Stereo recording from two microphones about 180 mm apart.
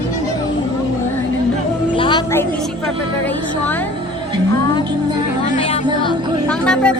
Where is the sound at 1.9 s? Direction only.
30° left (ahead or behind).